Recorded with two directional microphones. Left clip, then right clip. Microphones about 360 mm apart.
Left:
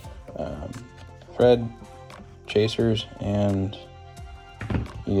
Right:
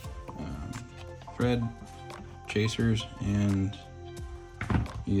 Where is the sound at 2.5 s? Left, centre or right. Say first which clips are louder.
Left 8 dB; centre.